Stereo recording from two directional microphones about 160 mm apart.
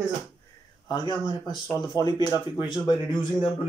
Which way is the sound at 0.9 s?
25° left (ahead or behind).